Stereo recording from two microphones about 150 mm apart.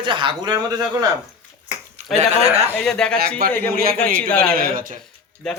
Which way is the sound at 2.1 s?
45° right (ahead or behind).